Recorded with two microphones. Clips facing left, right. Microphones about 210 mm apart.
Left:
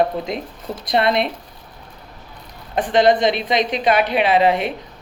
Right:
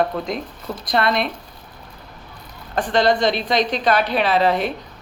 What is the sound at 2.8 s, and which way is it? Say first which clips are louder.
A woman's voice: left 3 dB; centre (ahead or behind).